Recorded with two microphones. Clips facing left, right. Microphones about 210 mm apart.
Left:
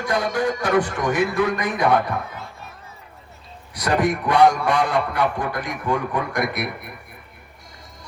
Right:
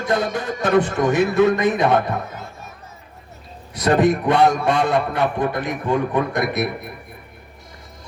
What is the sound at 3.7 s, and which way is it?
A man's voice, 25° right (ahead or behind).